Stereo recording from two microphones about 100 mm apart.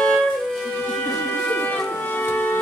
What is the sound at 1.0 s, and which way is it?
Music, 15° left (ahead or behind).